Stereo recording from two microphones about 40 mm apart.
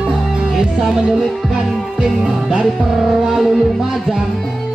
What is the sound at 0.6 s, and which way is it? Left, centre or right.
Music, centre.